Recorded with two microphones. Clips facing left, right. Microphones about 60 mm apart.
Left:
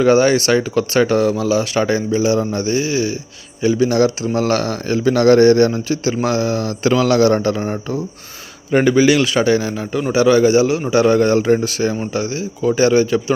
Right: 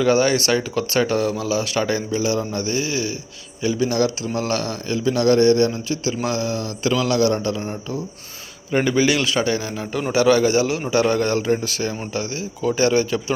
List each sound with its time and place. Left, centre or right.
0.0 s speech: left
0.9 s speech: left
1.5 s speech: left
8.7 s a man's voice: centre
10.2 s a man's voice: centre